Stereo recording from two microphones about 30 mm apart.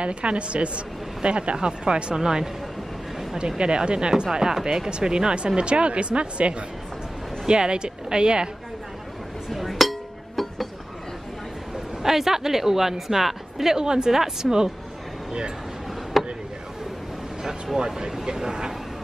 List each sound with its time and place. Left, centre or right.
0.0 s speech: right; by 4.8 s centre
4.8 s speech: right
9.5 s chink: centre
12.0 s speech: centre
13.7 s speech: right
16.1 s a sound: centre
17.7 s speech: right